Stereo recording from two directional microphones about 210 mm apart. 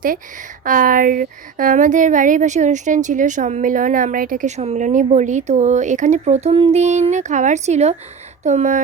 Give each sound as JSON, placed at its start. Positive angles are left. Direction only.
{"t": 0.6, "sound": "speech", "side_deg": -40}